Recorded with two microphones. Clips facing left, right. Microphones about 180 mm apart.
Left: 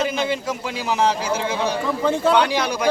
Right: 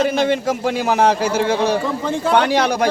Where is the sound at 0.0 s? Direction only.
55° right (ahead or behind).